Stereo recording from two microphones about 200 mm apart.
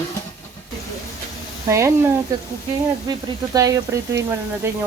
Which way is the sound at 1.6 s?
15° right (ahead or behind).